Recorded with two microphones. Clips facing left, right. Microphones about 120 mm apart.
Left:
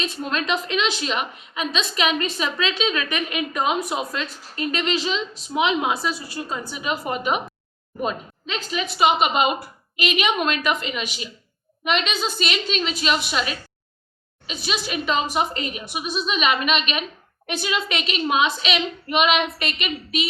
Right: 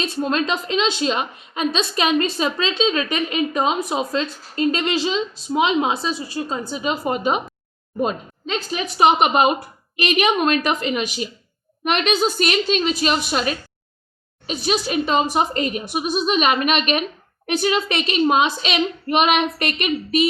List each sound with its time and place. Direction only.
0.0 s a woman's voice: 35° right (ahead or behind)